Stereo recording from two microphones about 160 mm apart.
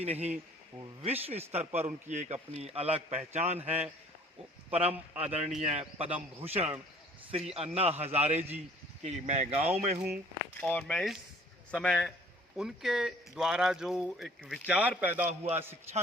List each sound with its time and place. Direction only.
0.0 s a man's voice: 40° right (ahead or behind)
4.7 s a man's voice: 40° right (ahead or behind)
10.5 s speech: 10° left (ahead or behind); by 15.2 s 10° right (ahead or behind)
15.2 s a man's voice: 45° right (ahead or behind)